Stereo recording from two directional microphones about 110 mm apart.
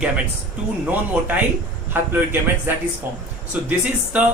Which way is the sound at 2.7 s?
20° right (ahead or behind).